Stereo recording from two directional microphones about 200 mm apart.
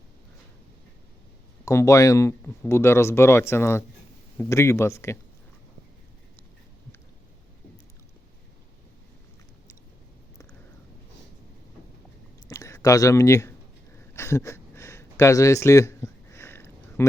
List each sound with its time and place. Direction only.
1.6 s speech: 15° left (ahead or behind)
12.5 s speech: 15° left (ahead or behind)
14.1 s a sound: 15° left (ahead or behind)